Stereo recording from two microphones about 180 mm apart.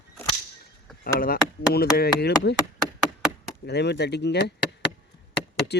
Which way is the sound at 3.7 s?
70° left (ahead or behind).